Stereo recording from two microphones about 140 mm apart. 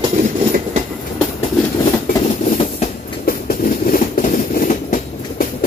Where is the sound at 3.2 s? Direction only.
85° left.